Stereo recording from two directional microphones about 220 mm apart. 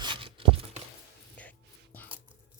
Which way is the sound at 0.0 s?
20° right (ahead or behind).